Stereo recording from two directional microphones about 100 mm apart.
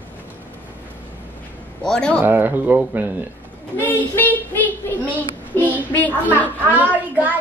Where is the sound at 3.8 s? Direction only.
20° left (ahead or behind).